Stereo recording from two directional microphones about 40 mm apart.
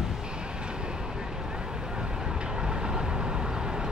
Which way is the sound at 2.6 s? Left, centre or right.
Centre.